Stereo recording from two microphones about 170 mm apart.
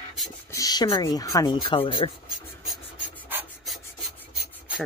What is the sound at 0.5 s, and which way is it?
Speech, 20° left (ahead or behind).